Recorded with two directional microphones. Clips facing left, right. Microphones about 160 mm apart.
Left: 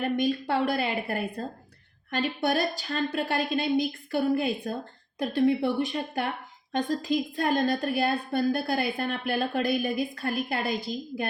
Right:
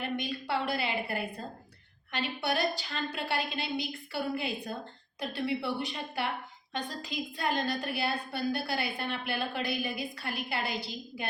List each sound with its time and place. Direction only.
0.0 s a woman's voice: 45° left (ahead or behind)